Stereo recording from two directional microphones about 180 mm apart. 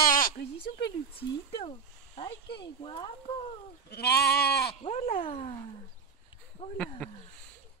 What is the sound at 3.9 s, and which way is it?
Goat, 65° left (ahead or behind).